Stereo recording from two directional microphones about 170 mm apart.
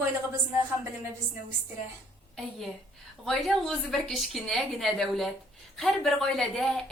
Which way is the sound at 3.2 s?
Centre (ahead or behind).